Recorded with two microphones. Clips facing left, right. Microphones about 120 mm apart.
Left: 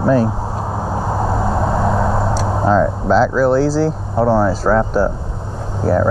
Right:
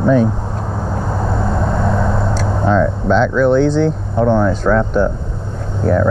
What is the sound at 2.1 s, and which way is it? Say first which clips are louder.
Vehicle: left 1 dB; 30° left (ahead or behind).